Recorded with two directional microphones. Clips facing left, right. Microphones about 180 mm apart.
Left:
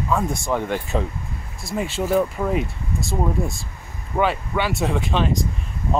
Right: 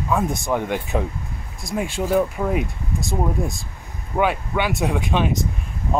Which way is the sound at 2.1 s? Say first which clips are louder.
Even; 5° right (ahead or behind).